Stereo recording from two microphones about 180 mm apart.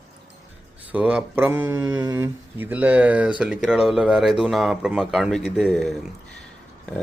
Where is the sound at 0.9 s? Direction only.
5° right (ahead or behind).